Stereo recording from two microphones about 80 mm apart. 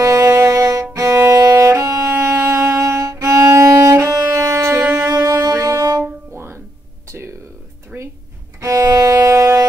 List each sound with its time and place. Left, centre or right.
0.0 s music: right
0.9 s violin: right
3.8 s music: right
5.0 s music: right
7.9 s drawer open or close: centre
8.5 s music: right